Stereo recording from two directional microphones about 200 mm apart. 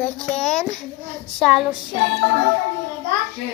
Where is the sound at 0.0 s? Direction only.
5° left (ahead or behind).